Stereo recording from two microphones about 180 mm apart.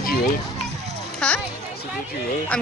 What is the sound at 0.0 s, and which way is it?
Music, 55° left (ahead or behind).